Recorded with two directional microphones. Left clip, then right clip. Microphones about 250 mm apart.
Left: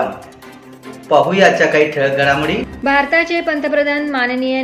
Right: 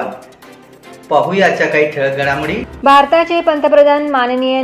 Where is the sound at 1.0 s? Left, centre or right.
Centre.